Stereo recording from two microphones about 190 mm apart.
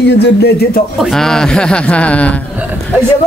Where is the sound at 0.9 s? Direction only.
Centre (ahead or behind).